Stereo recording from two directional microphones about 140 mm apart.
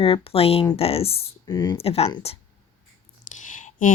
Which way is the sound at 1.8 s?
45° left (ahead or behind).